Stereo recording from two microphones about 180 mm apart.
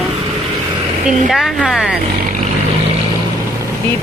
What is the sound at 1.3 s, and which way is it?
Speech, centre (ahead or behind).